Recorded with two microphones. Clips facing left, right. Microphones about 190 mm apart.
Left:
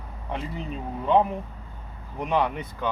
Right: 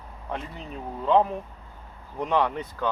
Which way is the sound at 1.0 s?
10° left (ahead or behind).